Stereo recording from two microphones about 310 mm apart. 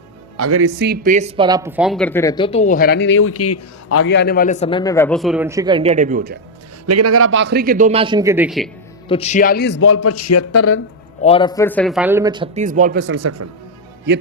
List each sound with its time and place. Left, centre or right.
0.3 s speech: right; by 4.0 s left
4.0 s speech: left; by 6.4 s right
6.8 s a man's voice: right; by 8.7 s centre
9.0 s a man's voice: centre; by 10.8 s left
11.2 s speech: centre; by 13.1 s right
13.1 s a man's voice: right
14.1 s speech: right